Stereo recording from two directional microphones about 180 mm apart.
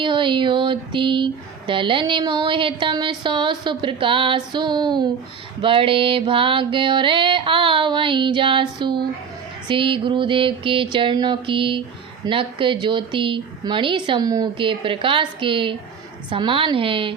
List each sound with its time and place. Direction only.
0.0 s speech: 25° right (ahead or behind)